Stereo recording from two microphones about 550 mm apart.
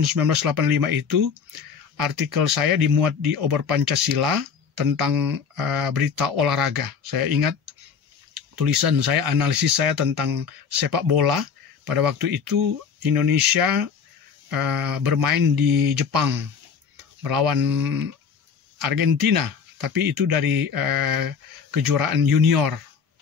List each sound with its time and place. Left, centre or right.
0.0 s speech: right
8.5 s speech: right